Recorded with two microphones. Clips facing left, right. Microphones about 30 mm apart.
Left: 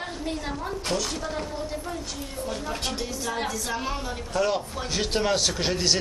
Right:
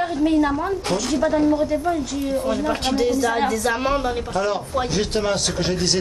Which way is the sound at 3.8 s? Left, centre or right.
Right.